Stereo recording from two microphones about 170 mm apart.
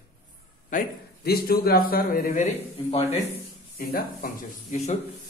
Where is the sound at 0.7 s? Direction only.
60° left (ahead or behind).